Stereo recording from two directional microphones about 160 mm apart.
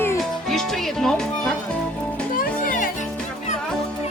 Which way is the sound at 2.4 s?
60° left (ahead or behind).